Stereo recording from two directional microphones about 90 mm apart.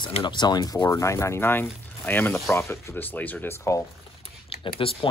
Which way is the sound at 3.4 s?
30° left (ahead or behind).